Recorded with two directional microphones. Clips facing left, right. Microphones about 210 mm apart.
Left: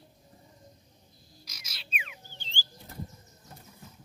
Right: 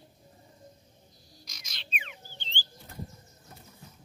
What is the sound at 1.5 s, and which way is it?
Frog, 5° left (ahead or behind).